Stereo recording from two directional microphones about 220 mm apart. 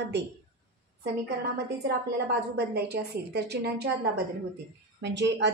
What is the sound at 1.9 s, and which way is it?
A woman's voice, 50° right (ahead or behind).